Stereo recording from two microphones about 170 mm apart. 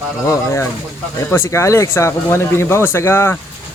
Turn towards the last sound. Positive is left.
turn(degrees=15)  # may be behind; listen again after turning